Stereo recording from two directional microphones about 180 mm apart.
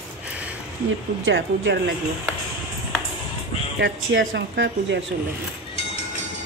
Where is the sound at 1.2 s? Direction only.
85° right.